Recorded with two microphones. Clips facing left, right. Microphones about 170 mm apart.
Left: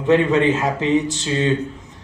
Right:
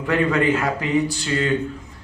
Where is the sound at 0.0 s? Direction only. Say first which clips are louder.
Left 4 dB; 20° left (ahead or behind).